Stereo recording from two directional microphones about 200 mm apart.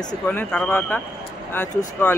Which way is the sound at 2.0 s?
10° left (ahead or behind).